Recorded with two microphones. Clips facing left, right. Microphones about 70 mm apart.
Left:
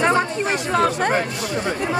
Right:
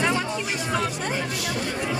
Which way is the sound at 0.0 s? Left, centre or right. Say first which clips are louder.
Left 6 dB; left.